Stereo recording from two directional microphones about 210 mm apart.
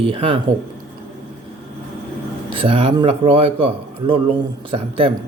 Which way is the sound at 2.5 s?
25° right (ahead or behind).